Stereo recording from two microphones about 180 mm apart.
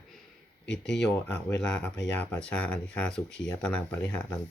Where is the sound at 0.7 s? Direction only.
80° left.